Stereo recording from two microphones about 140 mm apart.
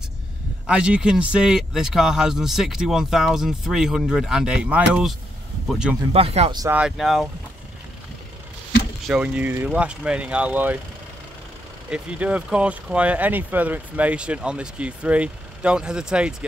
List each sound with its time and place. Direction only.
0.7 s speech: 5° right (ahead or behind)
6.1 s speech: 45° right (ahead or behind)
6.7 s speech: 5° right (ahead or behind)
9.0 s speech: 5° right (ahead or behind)
11.9 s speech: 10° right (ahead or behind)